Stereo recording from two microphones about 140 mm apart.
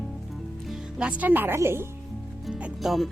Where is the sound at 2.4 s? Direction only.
5° right (ahead or behind).